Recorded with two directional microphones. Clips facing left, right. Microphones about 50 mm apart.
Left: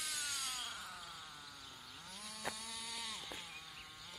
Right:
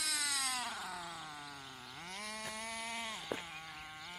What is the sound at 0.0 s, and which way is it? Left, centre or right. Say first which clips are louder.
Cat: right 6 dB; right.